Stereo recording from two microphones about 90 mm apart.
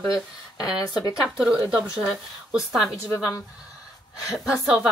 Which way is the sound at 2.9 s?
35° left (ahead or behind).